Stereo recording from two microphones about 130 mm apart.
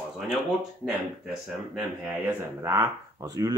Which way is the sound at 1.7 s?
10° right (ahead or behind).